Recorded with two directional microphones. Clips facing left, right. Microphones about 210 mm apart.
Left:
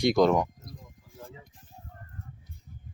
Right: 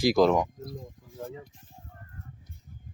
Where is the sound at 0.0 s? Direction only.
Centre (ahead or behind).